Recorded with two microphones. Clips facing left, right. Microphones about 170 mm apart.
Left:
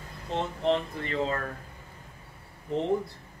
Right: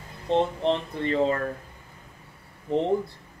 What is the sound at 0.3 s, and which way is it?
Speech, 30° right (ahead or behind).